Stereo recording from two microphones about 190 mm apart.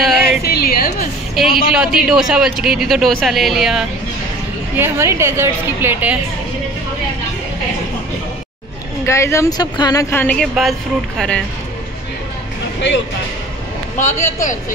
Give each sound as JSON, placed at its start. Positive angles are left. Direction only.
{"t": 0.0, "sound": "a sound", "side_deg": 0}
{"t": 0.4, "sound": "a sound", "side_deg": 55}
{"t": 1.4, "sound": "speech", "side_deg": 0}
{"t": 4.7, "sound": "a woman's voice", "side_deg": -10}
{"t": 9.0, "sound": "speech", "side_deg": 15}
{"t": 13.9, "sound": "a man's voice", "side_deg": 40}